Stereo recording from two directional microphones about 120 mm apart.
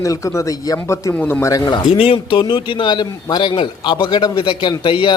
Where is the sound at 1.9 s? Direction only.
50° left (ahead or behind).